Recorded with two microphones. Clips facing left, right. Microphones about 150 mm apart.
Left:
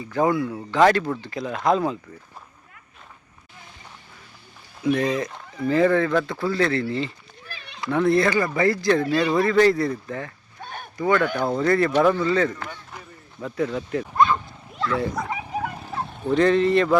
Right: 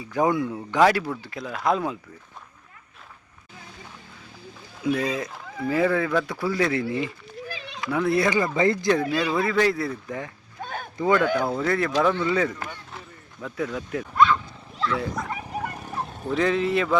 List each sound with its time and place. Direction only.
0.0 s speech: 10° right (ahead or behind)
0.8 s speech: 5° right (ahead or behind)
4.8 s speech: 10° right (ahead or behind)
7.9 s speech: 5° right (ahead or behind)
10.1 s speech: 15° right (ahead or behind)
11.5 s speech: centre (ahead or behind)
12.2 s speech: 10° right (ahead or behind)
13.4 s speech: centre (ahead or behind)
14.9 s vehicle: centre (ahead or behind)
16.0 s speech: 5° right (ahead or behind)